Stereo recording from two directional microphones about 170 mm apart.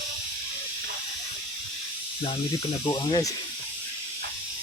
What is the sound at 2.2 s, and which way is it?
Speech, 30° left (ahead or behind).